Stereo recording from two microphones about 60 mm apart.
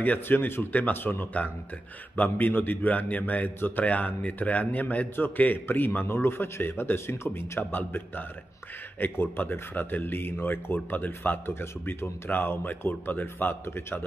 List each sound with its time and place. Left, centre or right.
0.0 s a man's voice: left
7.7 s a man's voice: left